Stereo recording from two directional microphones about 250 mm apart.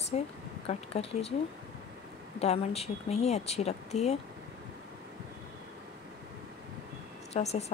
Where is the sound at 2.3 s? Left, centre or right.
Left.